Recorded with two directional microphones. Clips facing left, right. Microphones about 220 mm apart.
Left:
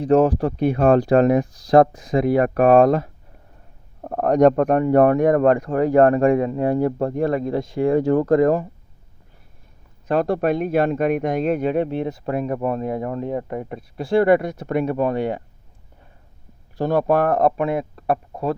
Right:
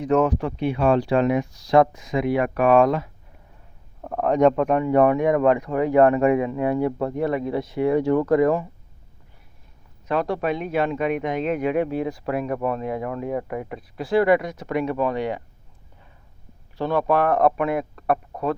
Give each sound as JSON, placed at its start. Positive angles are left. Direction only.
{"t": 0.0, "sound": "speech", "side_deg": 35}
{"t": 10.1, "sound": "speech", "side_deg": 50}
{"t": 12.6, "sound": "speech", "side_deg": 40}
{"t": 14.3, "sound": "speech", "side_deg": 50}
{"t": 16.7, "sound": "speech", "side_deg": 45}
{"t": 17.4, "sound": "speech", "side_deg": 30}